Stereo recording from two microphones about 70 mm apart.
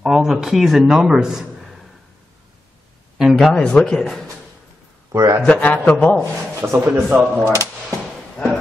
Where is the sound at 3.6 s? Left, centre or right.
Centre.